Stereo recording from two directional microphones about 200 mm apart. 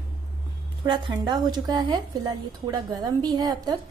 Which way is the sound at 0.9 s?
20° right (ahead or behind).